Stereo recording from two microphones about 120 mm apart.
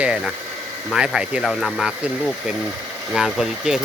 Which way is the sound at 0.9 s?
5° right (ahead or behind).